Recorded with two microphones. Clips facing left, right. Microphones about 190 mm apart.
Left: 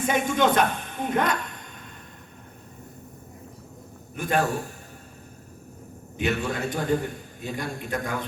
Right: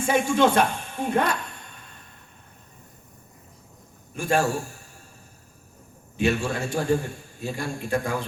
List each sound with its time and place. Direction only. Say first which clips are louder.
0.0 s a woman's voice: right 2 dB; 30° right (ahead or behind)
4.1 s a man's voice: right 1 dB; 30° right (ahead or behind)
6.1 s a man's voice: right 2 dB; 30° right (ahead or behind)